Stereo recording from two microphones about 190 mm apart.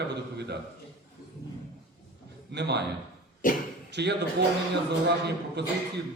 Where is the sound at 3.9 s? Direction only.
65° right (ahead or behind).